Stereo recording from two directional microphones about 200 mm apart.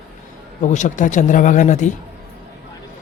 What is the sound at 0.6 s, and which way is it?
Speech, 35° left (ahead or behind).